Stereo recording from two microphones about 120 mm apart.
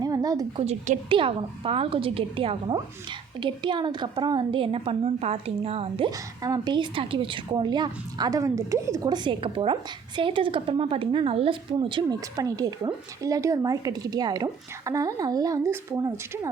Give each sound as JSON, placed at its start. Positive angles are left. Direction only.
{"t": 0.0, "sound": "a sound", "side_deg": -30}
{"t": 0.6, "sound": "a woman's voice", "side_deg": -60}
{"t": 1.2, "sound": "a woman's voice", "side_deg": -45}
{"t": 6.1, "sound": "a woman's voice", "side_deg": -30}
{"t": 12.4, "sound": "speech", "side_deg": -30}